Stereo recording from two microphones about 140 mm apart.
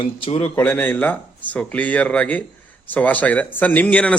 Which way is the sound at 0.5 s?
15° left (ahead or behind).